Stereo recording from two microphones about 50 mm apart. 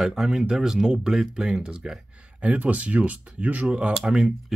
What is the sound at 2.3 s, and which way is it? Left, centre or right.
Speech, right.